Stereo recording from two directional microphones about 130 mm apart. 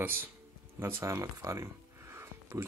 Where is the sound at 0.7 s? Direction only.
20° right (ahead or behind).